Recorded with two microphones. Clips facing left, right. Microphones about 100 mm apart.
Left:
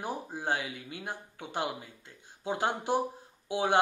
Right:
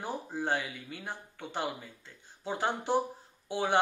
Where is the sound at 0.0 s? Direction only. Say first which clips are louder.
Even; 15° left (ahead or behind).